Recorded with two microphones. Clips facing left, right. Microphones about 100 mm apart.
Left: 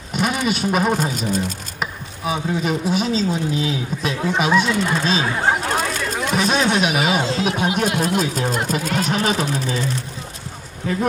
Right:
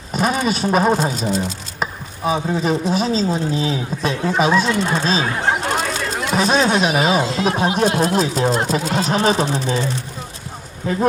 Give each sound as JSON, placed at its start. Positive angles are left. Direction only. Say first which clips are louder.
{"t": 0.1, "sound": "speech", "louder": "right 2 dB", "side_deg": -35}
{"t": 1.8, "sound": "a sound", "louder": "right 4 dB", "side_deg": -35}
{"t": 2.9, "sound": "speech", "louder": "right 2 dB", "side_deg": -35}
{"t": 4.8, "sound": "speech", "louder": "right 1 dB", "side_deg": -25}
{"t": 5.2, "sound": "chatter", "louder": "even", "side_deg": 0}
{"t": 6.3, "sound": "speech", "louder": "right 3 dB", "side_deg": -35}